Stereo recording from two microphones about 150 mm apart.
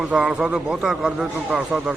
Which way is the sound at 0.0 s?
5° right (ahead or behind).